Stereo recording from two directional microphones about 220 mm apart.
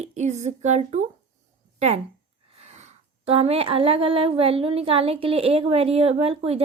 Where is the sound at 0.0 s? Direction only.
30° right (ahead or behind).